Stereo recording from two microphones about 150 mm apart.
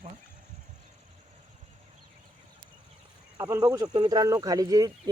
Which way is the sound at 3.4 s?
20° right (ahead or behind).